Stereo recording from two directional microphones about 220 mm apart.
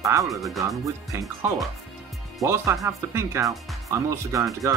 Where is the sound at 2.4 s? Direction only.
15° right (ahead or behind).